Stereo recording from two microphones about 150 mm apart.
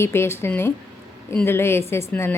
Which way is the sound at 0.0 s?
15° left (ahead or behind).